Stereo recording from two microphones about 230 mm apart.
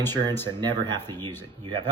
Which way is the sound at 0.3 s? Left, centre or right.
Centre.